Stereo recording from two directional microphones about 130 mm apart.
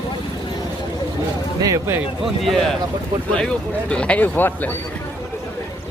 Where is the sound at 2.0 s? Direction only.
Centre (ahead or behind).